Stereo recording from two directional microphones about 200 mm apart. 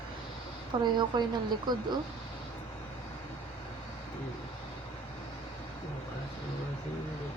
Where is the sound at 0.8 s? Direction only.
20° right (ahead or behind).